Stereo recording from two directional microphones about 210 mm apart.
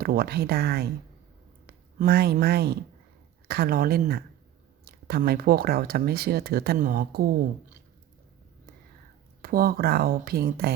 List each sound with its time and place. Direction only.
0.0 s speech: 45° right (ahead or behind)
9.4 s speech: 45° right (ahead or behind)